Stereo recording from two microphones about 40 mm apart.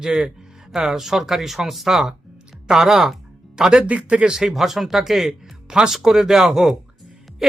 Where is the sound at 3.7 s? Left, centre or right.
Right.